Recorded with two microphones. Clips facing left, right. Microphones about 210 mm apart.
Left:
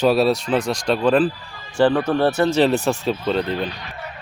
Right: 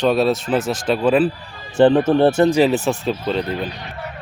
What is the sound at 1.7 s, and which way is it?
Speech, 25° right (ahead or behind).